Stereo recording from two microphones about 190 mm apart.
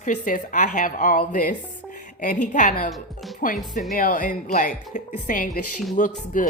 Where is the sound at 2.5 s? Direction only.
45° left (ahead or behind).